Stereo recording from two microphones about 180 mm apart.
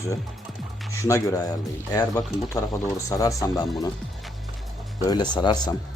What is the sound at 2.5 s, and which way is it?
Speech, 20° left (ahead or behind).